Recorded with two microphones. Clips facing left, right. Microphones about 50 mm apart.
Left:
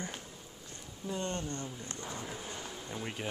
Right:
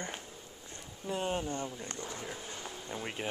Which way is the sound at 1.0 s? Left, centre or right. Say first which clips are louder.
Right 3 dB; centre.